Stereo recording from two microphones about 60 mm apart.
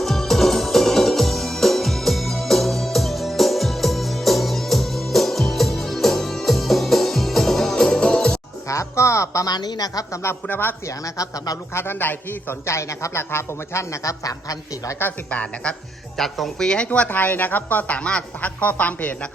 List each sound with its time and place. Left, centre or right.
0.0 s music: centre
8.6 s a sound: left
10.4 s a man's voice: left
10.8 s speech: left
11.7 s a man's voice: left
12.6 s a man's voice: left
15.3 s a woman's voice: centre
16.1 s a woman's voice: centre
17.1 s a woman's voice: left